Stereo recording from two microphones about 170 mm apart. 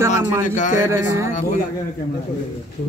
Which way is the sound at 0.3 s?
15° right (ahead or behind).